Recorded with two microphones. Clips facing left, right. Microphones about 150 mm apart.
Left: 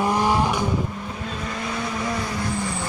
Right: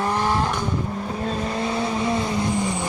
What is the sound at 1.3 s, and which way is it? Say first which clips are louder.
Vehicle: right 5 dB; 30° right (ahead or behind).